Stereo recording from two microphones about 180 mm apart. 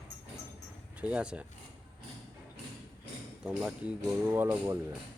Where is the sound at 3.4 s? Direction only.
5° right (ahead or behind).